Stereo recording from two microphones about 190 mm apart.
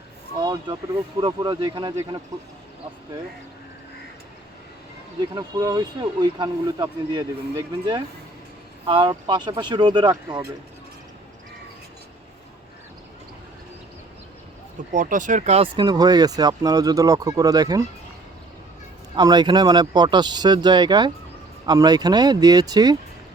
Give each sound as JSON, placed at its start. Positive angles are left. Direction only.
{"t": 0.3, "sound": "speech", "side_deg": -20}
{"t": 5.3, "sound": "speech", "side_deg": -20}
{"t": 14.9, "sound": "speech", "side_deg": -40}
{"t": 19.1, "sound": "speech", "side_deg": -20}